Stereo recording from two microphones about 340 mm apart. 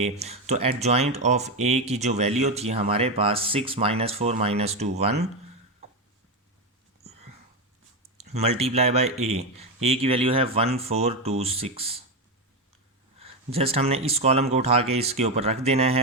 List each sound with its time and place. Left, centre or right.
0.0 s speech: centre
8.0 s speech: centre
13.1 s speech: centre